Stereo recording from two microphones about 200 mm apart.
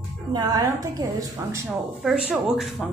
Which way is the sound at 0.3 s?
20° right (ahead or behind).